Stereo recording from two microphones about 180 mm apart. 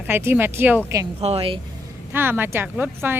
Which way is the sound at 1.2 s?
35° right (ahead or behind).